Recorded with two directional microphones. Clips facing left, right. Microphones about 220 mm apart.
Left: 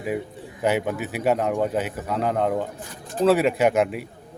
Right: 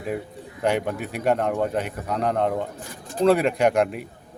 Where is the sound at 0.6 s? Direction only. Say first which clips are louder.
Left 1 dB; 5° left (ahead or behind).